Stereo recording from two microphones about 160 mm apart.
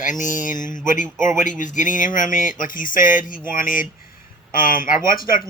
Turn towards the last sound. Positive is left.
turn(degrees=65)  # may be behind; listen again after turning